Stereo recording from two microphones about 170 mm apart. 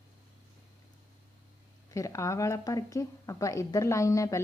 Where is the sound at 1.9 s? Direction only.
20° left (ahead or behind).